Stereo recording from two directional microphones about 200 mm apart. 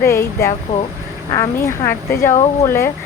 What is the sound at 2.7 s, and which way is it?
Speech, 10° left (ahead or behind).